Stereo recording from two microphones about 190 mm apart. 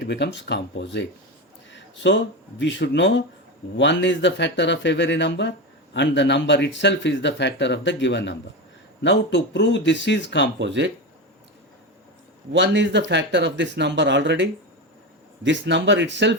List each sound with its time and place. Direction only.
0.0 s speech: 65° left (ahead or behind)
10.6 s speech: 65° right (ahead or behind)
12.5 s speech: 70° right (ahead or behind)